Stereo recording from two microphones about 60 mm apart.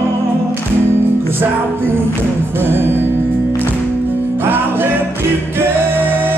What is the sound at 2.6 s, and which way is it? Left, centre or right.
Music, right.